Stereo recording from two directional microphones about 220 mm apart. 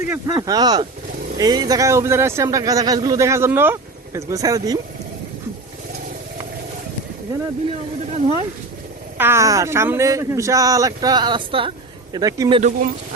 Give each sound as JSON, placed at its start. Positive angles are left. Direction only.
{"t": 0.0, "sound": "a man's voice", "side_deg": -15}
{"t": 8.1, "sound": "speech", "side_deg": -25}
{"t": 9.1, "sound": "a man's voice", "side_deg": -10}
{"t": 12.5, "sound": "speech", "side_deg": -30}